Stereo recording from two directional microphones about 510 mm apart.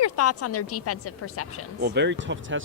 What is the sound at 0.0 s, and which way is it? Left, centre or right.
A woman's voice, left.